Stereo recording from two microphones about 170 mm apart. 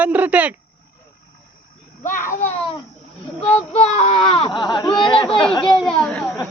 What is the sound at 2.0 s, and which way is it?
A child's voice, 50° left (ahead or behind).